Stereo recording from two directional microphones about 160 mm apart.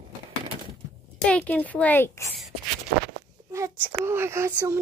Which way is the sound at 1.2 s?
10° left (ahead or behind).